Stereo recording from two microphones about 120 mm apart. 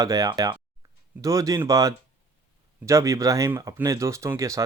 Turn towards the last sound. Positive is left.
turn(degrees=-25)  # may be behind; listen again after turning